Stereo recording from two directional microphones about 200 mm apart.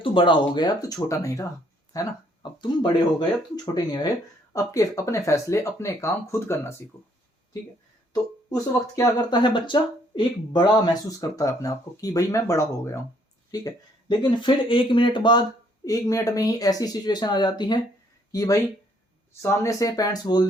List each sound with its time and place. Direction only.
0.0 s speech: 25° left (ahead or behind)
8.1 s speech: 15° left (ahead or behind)